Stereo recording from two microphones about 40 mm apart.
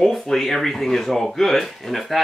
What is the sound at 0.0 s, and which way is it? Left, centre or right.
Speech, centre.